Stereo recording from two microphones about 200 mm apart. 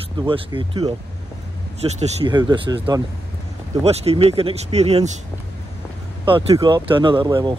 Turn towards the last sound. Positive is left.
turn(degrees=-20)  # may be behind; listen again after turning